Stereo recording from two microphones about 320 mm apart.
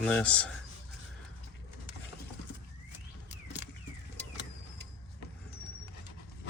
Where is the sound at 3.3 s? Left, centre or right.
Left.